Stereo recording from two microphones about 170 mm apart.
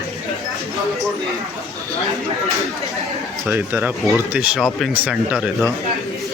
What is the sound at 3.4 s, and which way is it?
Speech, 10° right (ahead or behind).